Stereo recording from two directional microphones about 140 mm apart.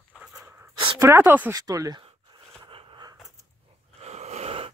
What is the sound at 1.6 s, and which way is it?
Speech, 25° right (ahead or behind).